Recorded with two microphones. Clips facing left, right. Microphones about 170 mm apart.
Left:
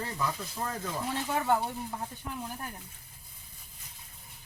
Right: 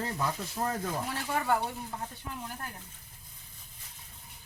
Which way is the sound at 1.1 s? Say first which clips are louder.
Left 2 dB; 20° left (ahead or behind).